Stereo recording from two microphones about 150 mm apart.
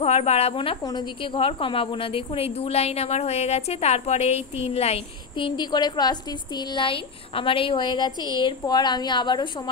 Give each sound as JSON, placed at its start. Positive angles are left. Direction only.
{"t": 0.0, "sound": "a woman's voice", "side_deg": 45}